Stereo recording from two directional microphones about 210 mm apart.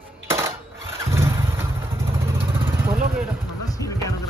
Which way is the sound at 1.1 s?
15° right (ahead or behind).